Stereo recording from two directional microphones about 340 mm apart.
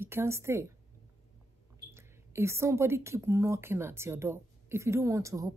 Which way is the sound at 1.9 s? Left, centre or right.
Centre.